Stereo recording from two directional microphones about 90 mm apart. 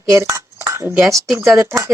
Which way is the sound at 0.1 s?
30° right (ahead or behind).